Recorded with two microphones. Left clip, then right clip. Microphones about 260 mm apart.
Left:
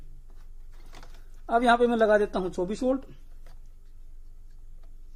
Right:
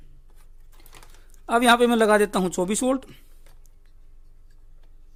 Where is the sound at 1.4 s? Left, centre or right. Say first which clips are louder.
Right 4 dB; right.